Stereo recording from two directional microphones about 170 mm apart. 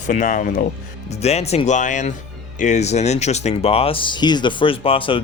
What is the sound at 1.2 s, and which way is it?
Speech, 40° left (ahead or behind).